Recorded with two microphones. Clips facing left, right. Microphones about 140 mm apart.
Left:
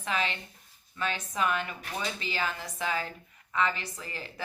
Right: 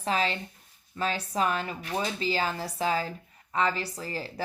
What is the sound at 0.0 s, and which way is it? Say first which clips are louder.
Speech: right 4 dB; 35° right (ahead or behind).